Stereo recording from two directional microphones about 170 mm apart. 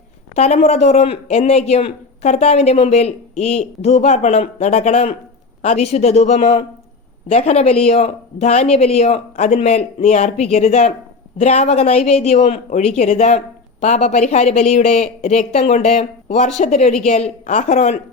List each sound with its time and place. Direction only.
0.3 s speech: 40° left (ahead or behind)